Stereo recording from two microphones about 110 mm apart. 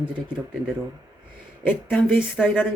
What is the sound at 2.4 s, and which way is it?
Speech, centre (ahead or behind).